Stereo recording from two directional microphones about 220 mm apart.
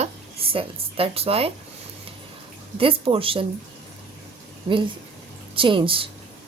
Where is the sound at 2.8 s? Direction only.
25° right (ahead or behind).